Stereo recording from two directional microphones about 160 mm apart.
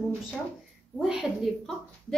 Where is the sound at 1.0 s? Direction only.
Centre (ahead or behind).